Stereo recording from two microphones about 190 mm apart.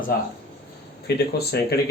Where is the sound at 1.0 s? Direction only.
55° left (ahead or behind).